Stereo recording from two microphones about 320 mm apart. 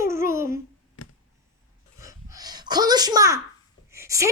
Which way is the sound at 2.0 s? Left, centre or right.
Centre.